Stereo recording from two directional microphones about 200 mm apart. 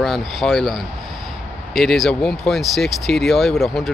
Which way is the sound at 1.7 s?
Centre (ahead or behind).